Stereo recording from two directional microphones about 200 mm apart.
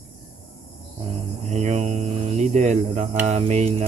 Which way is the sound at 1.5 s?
35° right (ahead or behind).